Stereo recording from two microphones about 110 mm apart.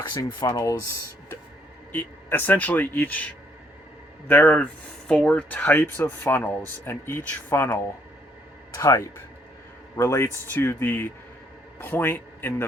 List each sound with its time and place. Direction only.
0.1 s speech: 35° left (ahead or behind)
1.9 s speech: 15° left (ahead or behind)
4.3 s speech: 15° left (ahead or behind)